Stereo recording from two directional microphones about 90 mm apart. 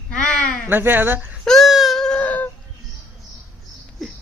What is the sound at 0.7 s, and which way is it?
Speech, 25° right (ahead or behind).